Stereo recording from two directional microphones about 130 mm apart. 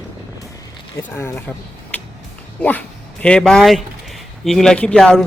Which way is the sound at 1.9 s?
10° left (ahead or behind).